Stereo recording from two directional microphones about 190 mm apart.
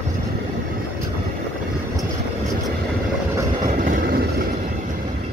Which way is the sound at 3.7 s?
45° right (ahead or behind).